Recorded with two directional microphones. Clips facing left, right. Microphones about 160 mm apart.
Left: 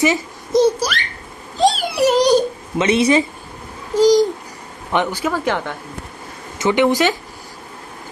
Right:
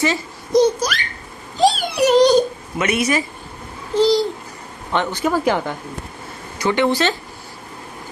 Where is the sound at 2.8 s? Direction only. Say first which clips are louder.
Left 5 dB; 25° left (ahead or behind).